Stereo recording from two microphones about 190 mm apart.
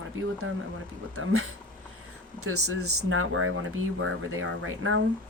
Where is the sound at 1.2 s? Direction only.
90° right.